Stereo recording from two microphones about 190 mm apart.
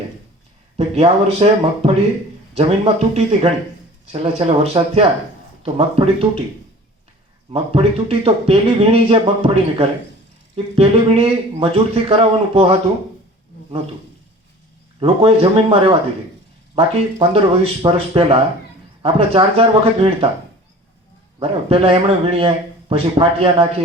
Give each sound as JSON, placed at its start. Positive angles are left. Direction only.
{"t": 0.8, "sound": "speech", "side_deg": -30}
{"t": 7.5, "sound": "speech", "side_deg": -30}
{"t": 15.0, "sound": "a man's voice", "side_deg": -30}
{"t": 21.3, "sound": "a man's voice", "side_deg": -30}